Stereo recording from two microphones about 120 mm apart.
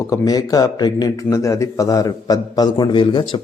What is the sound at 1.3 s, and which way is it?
A man's voice, 25° left (ahead or behind).